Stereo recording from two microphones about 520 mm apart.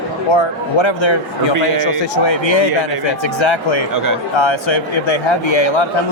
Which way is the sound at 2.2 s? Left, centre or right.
Left.